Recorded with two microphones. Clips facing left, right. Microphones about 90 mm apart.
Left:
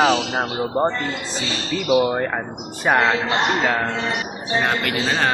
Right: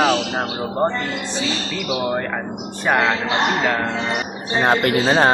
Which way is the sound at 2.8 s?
5° left (ahead or behind).